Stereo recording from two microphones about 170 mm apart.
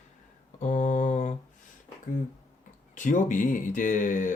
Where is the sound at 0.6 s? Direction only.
45° left (ahead or behind).